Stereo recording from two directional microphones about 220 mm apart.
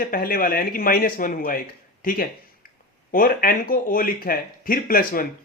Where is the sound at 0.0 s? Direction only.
40° left (ahead or behind).